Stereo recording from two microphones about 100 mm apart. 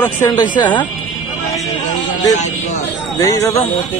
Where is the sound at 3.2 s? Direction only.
30° left (ahead or behind).